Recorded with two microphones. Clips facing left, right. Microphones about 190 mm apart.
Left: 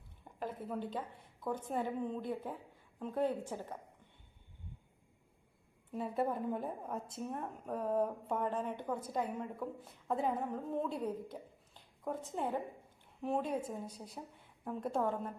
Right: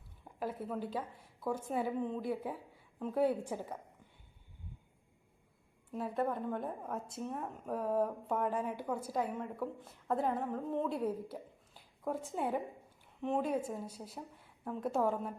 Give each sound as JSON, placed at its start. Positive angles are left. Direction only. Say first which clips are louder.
{"t": 0.3, "sound": "a woman's voice", "louder": "right 2 dB", "side_deg": -5}
{"t": 5.9, "sound": "a woman's voice", "louder": "even", "side_deg": 0}